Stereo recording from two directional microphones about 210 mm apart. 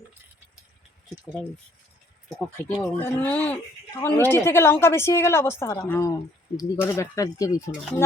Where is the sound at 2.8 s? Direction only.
10° left (ahead or behind).